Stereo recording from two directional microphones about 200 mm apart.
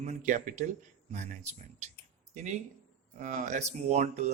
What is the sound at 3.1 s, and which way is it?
A man's voice, 40° right (ahead or behind).